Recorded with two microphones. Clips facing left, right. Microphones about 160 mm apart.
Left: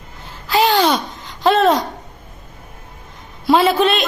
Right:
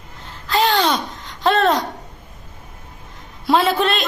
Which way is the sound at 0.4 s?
5° left (ahead or behind).